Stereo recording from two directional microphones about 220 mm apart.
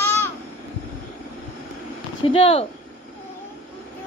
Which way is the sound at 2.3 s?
25° left (ahead or behind).